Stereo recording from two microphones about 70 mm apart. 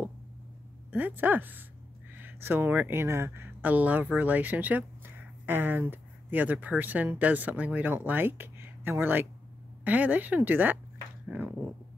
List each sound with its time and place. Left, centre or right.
0.9 s speech: right
2.1 s a sound: right
2.9 s speech: right